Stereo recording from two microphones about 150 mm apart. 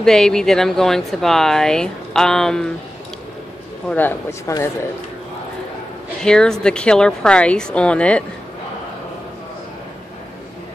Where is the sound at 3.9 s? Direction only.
15° left (ahead or behind).